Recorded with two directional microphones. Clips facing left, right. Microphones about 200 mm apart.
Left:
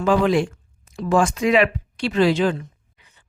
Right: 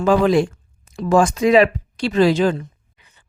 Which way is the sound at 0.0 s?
40° right (ahead or behind).